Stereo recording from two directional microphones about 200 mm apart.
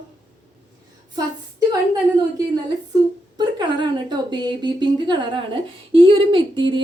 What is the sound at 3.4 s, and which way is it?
A woman's voice, 20° right (ahead or behind).